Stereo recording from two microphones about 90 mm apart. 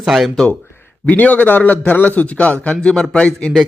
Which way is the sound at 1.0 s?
15° left (ahead or behind).